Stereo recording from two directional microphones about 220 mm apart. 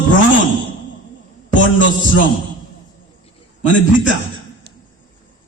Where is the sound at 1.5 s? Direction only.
60° left (ahead or behind).